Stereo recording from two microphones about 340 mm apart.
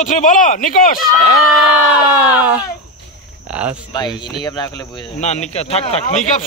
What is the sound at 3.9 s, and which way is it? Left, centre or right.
Speech, centre.